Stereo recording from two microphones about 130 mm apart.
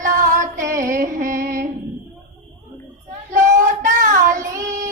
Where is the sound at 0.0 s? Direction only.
85° right.